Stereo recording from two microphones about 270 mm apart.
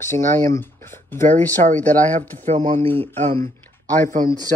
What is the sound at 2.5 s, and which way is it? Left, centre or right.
Speech, right.